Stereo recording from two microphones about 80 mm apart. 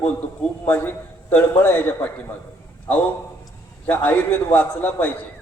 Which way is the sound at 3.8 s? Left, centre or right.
Left.